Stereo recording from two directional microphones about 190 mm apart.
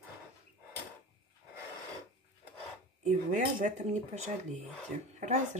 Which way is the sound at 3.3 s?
40° right (ahead or behind).